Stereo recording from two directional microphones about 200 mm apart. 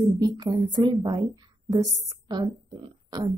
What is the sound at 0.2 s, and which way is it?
Speech, 20° right (ahead or behind).